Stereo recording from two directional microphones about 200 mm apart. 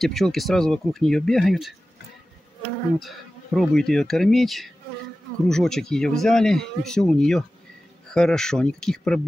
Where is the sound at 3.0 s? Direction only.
Centre (ahead or behind).